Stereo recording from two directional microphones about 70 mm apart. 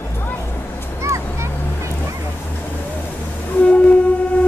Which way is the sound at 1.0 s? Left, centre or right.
Right.